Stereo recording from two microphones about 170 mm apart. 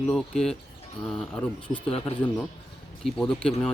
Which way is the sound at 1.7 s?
35° left (ahead or behind).